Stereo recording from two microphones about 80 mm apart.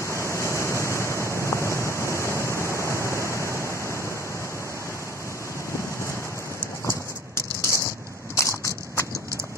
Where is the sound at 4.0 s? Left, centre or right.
Left.